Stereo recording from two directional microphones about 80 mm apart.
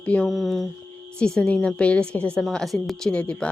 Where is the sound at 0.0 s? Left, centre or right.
Centre.